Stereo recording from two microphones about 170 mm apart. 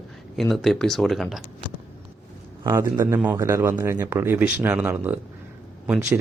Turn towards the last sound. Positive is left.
turn(degrees=-5)  # may be behind; listen again after turning